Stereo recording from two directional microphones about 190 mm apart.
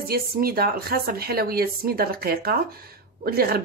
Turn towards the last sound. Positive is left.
turn(degrees=-55)  # may be behind; listen again after turning